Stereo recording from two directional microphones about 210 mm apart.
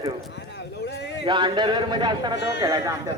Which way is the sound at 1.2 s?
20° right (ahead or behind).